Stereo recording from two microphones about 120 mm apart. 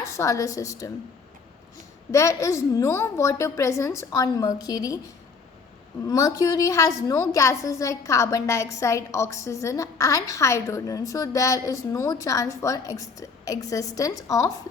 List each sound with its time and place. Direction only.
0.0 s a woman's voice: 25° left (ahead or behind)
2.1 s a woman's voice: 25° left (ahead or behind)
6.1 s a woman's voice: 30° left (ahead or behind)